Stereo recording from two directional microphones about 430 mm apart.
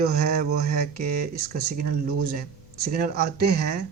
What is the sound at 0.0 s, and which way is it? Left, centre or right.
Speech, right.